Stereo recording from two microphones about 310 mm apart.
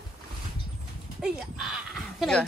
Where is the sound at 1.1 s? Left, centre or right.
Centre.